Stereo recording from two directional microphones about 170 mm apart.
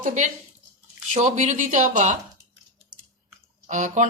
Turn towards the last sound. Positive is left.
turn(degrees=-45)  # may be behind; listen again after turning